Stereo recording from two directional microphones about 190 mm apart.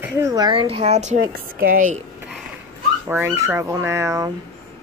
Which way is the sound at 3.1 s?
10° right (ahead or behind).